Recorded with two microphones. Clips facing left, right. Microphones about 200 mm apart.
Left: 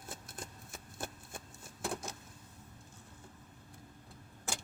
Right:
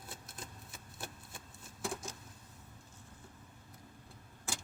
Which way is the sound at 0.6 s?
50° left (ahead or behind).